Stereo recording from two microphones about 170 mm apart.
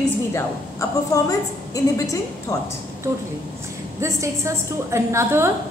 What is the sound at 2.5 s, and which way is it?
Speech, 20° left (ahead or behind).